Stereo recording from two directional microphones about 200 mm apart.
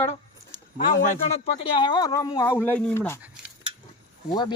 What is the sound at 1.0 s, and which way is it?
Speech, 30° left (ahead or behind).